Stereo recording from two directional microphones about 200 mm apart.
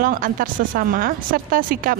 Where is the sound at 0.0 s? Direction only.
45° right (ahead or behind).